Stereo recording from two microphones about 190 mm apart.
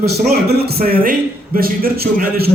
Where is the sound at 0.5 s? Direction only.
55° right (ahead or behind).